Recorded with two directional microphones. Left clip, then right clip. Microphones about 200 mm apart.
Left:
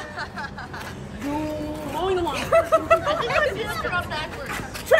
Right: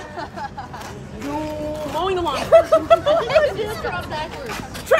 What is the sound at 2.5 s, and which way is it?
Speech, 55° right (ahead or behind).